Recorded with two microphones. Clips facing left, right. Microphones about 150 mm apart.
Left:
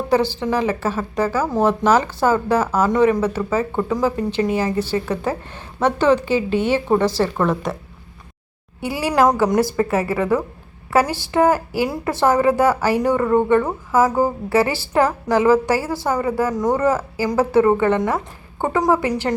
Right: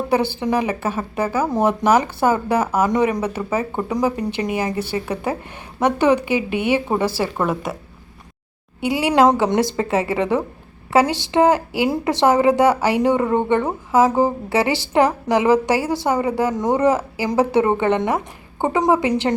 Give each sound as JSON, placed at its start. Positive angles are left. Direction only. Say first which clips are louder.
{"t": 0.3, "sound": "speech", "louder": "even", "side_deg": -15}
{"t": 8.8, "sound": "a woman's voice", "louder": "right 2 dB", "side_deg": -20}